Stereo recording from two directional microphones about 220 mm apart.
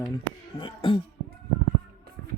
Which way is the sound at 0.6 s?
20° left (ahead or behind).